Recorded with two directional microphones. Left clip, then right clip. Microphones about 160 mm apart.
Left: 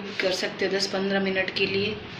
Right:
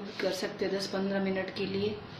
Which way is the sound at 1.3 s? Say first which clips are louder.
Left 9 dB; 50° right (ahead or behind).